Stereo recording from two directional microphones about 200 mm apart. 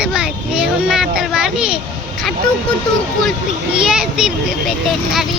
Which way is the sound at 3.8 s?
5° right (ahead or behind).